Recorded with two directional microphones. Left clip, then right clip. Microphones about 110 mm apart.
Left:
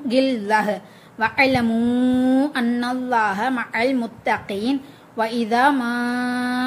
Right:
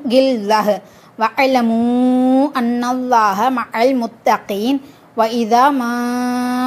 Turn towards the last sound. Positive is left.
turn(degrees=-50)  # may be behind; listen again after turning